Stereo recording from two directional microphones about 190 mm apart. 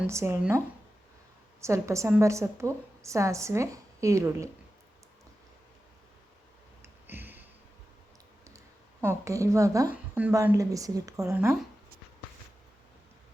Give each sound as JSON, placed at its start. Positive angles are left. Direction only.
{"t": 0.0, "sound": "a woman's voice", "side_deg": -15}
{"t": 1.6, "sound": "a woman's voice", "side_deg": -15}
{"t": 6.8, "sound": "a sound", "side_deg": -10}
{"t": 8.4, "sound": "speech", "side_deg": -15}